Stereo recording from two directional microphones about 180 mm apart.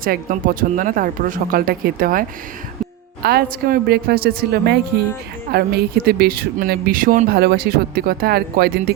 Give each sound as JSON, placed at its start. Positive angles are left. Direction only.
{"t": 0.0, "sound": "speech", "side_deg": -50}
{"t": 3.2, "sound": "speech", "side_deg": -60}